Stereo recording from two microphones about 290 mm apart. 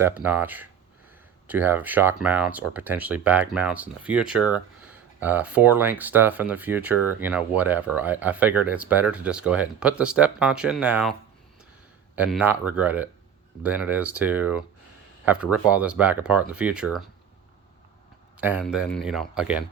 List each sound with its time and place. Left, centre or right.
0.3 s speech: centre
12.1 s speech: centre
18.3 s speech: centre